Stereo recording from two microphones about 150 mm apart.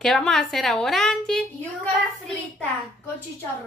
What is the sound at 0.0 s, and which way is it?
Speech, 5° left (ahead or behind).